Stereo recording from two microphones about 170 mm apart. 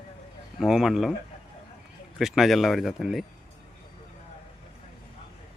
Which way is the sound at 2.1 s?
Centre (ahead or behind).